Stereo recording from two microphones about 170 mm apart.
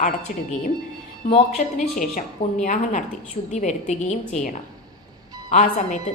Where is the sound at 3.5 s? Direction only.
45° left (ahead or behind).